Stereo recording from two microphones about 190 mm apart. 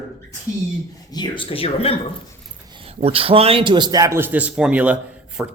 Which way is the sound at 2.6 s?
30° right (ahead or behind).